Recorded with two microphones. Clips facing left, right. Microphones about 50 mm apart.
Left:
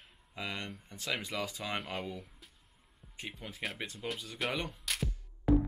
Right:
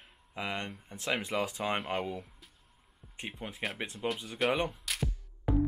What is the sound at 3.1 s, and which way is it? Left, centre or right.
Speech, right.